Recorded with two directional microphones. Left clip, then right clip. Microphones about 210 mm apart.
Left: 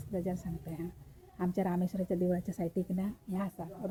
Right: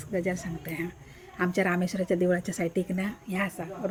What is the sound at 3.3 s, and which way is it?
Speech, 40° right (ahead or behind).